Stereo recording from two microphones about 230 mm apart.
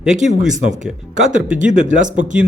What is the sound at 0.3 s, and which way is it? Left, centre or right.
Speech, right.